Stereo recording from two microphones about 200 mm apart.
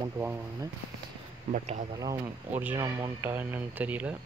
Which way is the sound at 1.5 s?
40° right (ahead or behind).